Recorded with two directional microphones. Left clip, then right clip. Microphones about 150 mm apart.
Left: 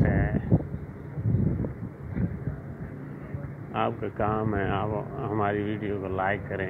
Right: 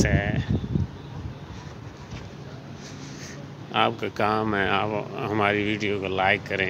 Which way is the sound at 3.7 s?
80° right.